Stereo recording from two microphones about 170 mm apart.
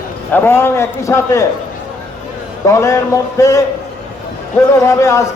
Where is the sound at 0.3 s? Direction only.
15° left (ahead or behind).